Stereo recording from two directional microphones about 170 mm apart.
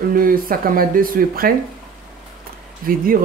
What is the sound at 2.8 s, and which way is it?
Speech, 55° right (ahead or behind).